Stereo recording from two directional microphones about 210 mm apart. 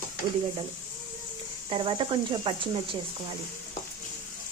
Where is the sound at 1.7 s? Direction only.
25° right (ahead or behind).